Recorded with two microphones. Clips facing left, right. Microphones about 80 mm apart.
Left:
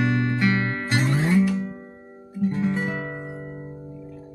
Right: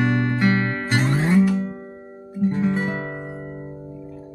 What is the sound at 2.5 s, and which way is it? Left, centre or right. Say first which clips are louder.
Guitar: right 3 dB; right.